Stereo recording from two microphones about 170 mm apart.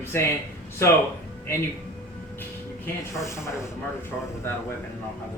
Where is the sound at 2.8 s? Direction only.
15° left (ahead or behind).